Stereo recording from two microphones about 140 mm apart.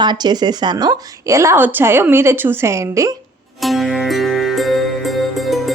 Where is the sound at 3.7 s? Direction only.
Centre (ahead or behind).